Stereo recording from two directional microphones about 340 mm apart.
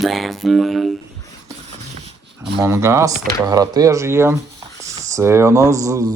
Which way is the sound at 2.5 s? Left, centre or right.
Centre.